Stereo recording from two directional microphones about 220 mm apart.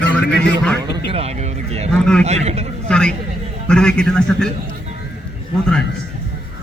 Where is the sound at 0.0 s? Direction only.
50° left (ahead or behind).